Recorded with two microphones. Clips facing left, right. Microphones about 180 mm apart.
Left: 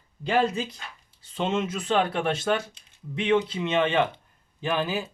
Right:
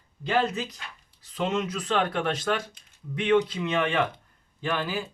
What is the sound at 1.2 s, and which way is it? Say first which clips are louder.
Speech: left 1 dB; 25° left (ahead or behind).